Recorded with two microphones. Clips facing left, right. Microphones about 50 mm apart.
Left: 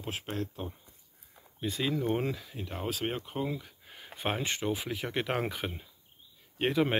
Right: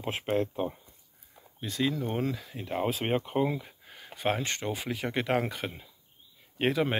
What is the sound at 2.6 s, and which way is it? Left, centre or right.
Speech, right.